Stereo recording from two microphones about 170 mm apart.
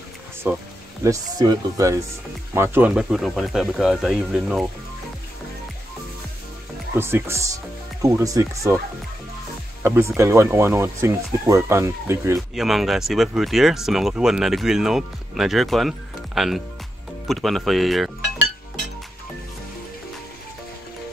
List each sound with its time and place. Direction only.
0.5 s speech: 15° right (ahead or behind)
7.0 s speech: 15° right (ahead or behind)
9.8 s speech: 15° right (ahead or behind)
12.4 s speech: centre (ahead or behind)